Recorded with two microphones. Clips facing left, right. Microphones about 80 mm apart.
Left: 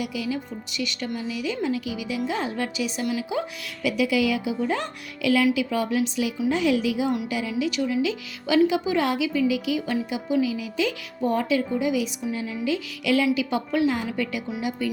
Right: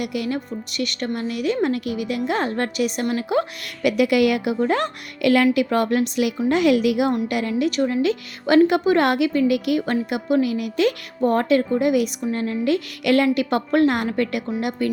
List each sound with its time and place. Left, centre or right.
0.0 s a woman's voice: right
7.6 s a woman's voice: right